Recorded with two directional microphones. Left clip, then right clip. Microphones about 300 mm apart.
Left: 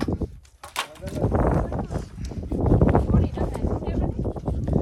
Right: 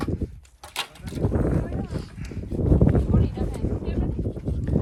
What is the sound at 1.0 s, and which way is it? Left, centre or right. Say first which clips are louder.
Arrow: left 4 dB; centre.